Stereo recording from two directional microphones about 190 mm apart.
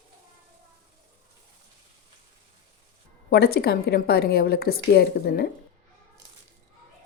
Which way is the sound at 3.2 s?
55° left (ahead or behind).